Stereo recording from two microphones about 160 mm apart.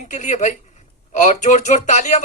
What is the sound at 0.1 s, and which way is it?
Speech, 50° left (ahead or behind).